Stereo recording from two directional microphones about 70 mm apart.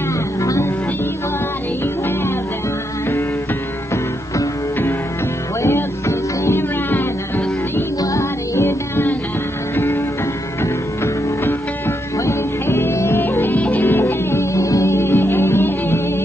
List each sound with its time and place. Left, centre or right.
0.4 s music: left
5.6 s music: left
12.3 s music: left